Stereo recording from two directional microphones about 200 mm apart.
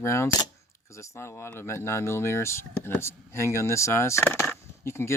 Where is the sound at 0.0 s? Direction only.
15° left (ahead or behind).